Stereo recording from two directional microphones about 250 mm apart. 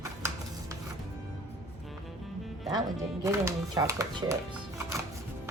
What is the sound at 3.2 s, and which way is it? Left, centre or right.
Speech, centre.